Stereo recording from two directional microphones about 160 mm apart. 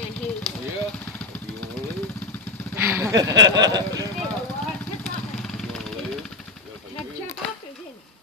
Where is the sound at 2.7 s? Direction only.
15° right (ahead or behind).